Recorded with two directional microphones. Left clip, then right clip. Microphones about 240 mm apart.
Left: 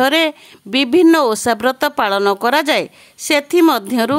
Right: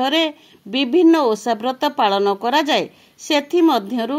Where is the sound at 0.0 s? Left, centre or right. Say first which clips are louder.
Left 4 dB; left.